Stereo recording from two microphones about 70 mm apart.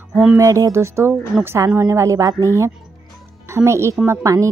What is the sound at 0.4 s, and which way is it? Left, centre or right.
A woman's voice, right.